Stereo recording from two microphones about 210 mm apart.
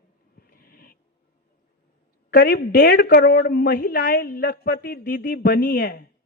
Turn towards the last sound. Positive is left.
turn(degrees=50)  # may be behind; listen again after turning